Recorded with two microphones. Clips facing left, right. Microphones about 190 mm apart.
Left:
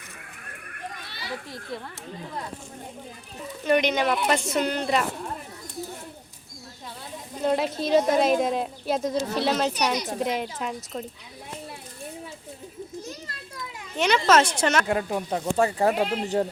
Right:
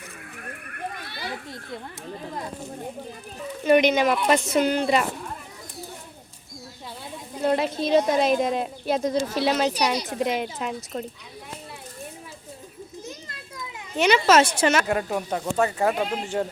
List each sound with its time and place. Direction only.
3.7 s a woman's voice: 10° right (ahead or behind)
7.4 s speech: centre (ahead or behind)
14.0 s a woman's voice: 10° right (ahead or behind)
14.8 s speech: 25° left (ahead or behind)